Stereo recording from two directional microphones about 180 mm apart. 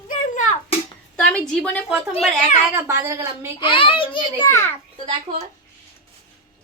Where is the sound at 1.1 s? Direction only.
5° left (ahead or behind).